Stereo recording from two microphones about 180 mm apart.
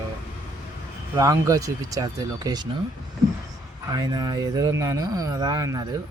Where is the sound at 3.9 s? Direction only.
20° right (ahead or behind).